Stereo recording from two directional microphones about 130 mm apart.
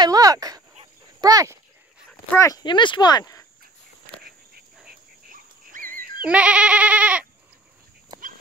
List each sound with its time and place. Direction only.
0.0 s speech: 30° right (ahead or behind)
2.0 s dog: 20° left (ahead or behind)
2.6 s speech: 35° left (ahead or behind)
5.3 s dog: 90° right
6.2 s goat: 10° right (ahead or behind)